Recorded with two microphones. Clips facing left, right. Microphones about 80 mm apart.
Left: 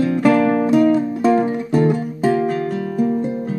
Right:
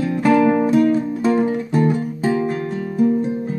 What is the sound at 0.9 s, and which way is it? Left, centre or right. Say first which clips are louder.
Music: left 2 dB; centre.